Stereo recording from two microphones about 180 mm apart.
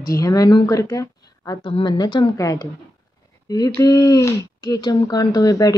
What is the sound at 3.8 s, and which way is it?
Speech, 20° left (ahead or behind).